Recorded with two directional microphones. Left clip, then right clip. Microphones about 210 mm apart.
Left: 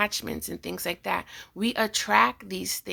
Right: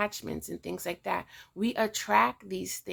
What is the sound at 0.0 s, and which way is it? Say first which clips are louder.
Speech: left 5 dB; 15° left (ahead or behind).